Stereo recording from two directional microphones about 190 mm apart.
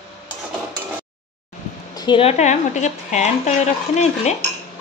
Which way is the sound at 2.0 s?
25° left (ahead or behind).